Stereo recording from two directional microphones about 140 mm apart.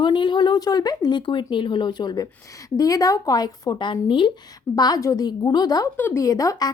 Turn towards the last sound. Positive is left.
turn(degrees=25)  # may be behind; listen again after turning